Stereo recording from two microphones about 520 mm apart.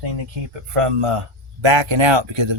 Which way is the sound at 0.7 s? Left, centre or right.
Right.